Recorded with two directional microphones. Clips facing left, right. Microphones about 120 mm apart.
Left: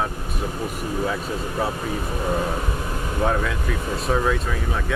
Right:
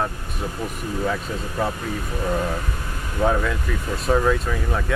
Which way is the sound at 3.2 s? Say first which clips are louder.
Right 2 dB; centre (ahead or behind).